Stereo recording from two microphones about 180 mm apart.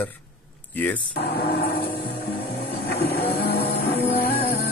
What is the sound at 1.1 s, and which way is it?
Speech, 65° left (ahead or behind).